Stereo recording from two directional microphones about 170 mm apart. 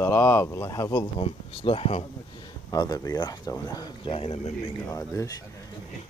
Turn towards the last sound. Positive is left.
turn(degrees=20)  # may be behind; listen again after turning